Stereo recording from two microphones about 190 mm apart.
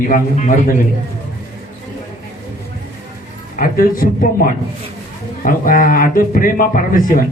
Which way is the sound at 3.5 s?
45° left (ahead or behind).